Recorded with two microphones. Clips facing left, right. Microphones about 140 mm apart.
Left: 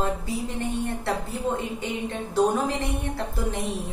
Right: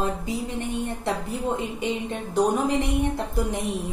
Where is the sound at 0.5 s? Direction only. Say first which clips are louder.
Even; 15° right (ahead or behind).